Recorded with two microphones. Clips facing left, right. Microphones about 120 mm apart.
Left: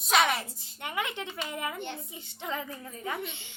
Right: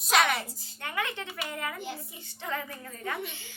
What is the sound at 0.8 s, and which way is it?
A woman's voice, 20° left (ahead or behind).